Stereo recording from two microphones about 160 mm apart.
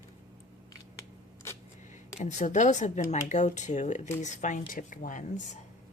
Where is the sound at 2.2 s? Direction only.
50° left (ahead or behind).